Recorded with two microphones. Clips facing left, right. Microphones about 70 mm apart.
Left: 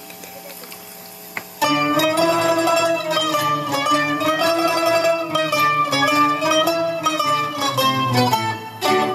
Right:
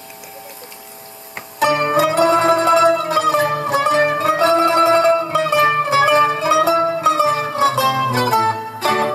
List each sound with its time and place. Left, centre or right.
1.6 s music: right